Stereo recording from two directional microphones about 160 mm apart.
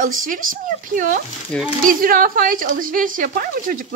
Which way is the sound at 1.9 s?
60° right (ahead or behind).